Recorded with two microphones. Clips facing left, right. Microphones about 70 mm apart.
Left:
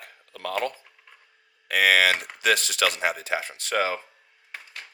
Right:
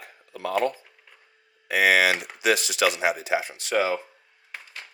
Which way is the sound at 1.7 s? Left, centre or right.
Left.